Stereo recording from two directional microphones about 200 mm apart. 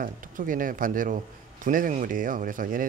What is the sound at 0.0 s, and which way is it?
A man's voice, 45° right (ahead or behind).